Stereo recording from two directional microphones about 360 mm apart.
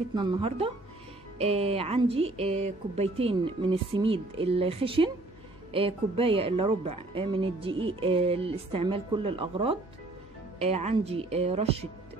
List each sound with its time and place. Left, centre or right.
0.1 s speech: centre